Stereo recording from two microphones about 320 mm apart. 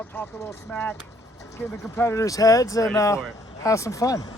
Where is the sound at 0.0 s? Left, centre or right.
Centre.